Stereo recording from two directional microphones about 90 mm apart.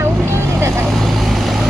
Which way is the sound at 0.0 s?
30° right (ahead or behind).